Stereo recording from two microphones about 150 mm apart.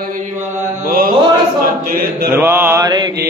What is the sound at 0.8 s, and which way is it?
Mantra, 75° right (ahead or behind).